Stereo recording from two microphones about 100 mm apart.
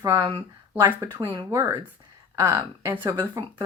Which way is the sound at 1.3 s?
30° right (ahead or behind).